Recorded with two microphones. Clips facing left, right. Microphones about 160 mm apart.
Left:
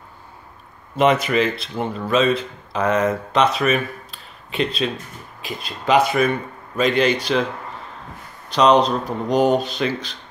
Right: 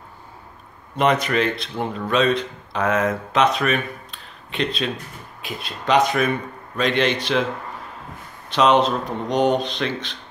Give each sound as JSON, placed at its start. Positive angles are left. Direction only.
{"t": 0.9, "sound": "speech", "side_deg": 5}
{"t": 8.5, "sound": "speech", "side_deg": 0}